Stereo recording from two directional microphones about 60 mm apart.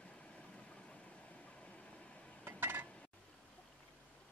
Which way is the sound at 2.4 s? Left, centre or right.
Right.